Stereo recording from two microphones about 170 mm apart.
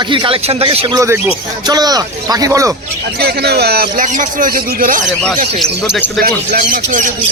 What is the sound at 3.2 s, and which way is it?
Speech, 70° right (ahead or behind).